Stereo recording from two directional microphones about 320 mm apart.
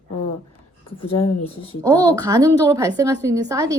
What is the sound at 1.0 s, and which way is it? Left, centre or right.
Speech, left.